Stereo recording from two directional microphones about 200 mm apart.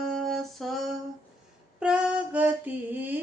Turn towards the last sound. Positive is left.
turn(degrees=-10)  # may be behind; listen again after turning